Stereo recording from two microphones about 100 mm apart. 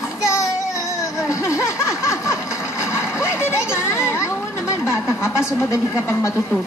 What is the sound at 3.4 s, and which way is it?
Speech, 25° left (ahead or behind).